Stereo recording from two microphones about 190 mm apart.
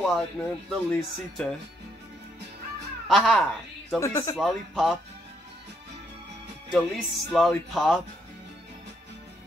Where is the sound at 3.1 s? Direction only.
5° left (ahead or behind).